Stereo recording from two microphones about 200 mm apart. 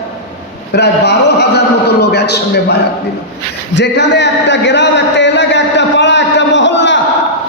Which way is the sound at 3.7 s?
60° left (ahead or behind).